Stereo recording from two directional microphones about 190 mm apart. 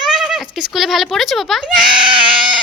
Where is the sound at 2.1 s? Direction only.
25° right (ahead or behind).